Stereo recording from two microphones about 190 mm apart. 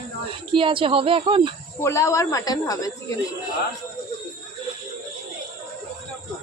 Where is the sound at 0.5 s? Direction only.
25° right (ahead or behind).